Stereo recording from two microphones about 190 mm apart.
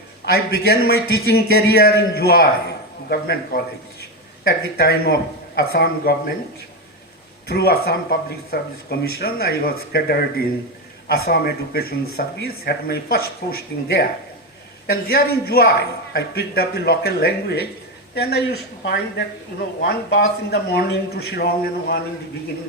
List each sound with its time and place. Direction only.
0.3 s a man's voice: 55° left (ahead or behind)
7.4 s a man's voice: 55° left (ahead or behind)